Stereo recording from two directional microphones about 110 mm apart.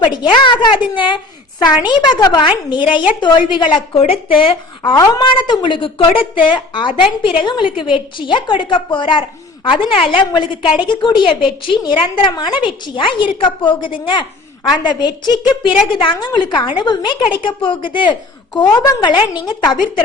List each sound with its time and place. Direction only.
0.0 s a woman's voice: 45° left (ahead or behind)
4.8 s a woman's voice: 35° left (ahead or behind)
18.8 s a woman's voice: 35° left (ahead or behind)